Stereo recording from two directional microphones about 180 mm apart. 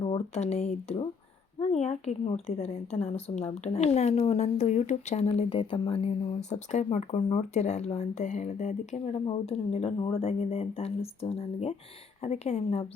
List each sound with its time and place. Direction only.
0.0 s a woman's voice: 35° left (ahead or behind)